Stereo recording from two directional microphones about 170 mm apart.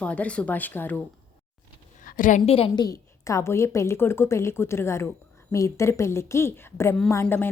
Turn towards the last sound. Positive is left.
turn(degrees=10)  # may be behind; listen again after turning